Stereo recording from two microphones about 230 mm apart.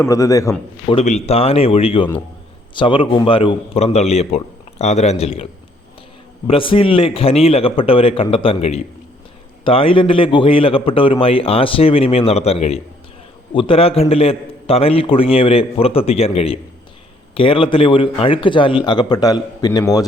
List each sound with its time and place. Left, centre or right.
0.1 s a man's voice: centre
0.9 s a man's voice: left
6.5 s a man's voice: left